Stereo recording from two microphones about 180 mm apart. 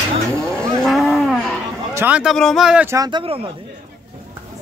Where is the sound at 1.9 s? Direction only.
10° right (ahead or behind).